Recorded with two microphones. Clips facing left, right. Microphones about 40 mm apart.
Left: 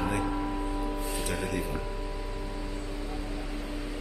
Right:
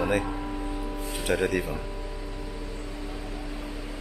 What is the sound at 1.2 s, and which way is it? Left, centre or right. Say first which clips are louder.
Speech: right 10 dB; right.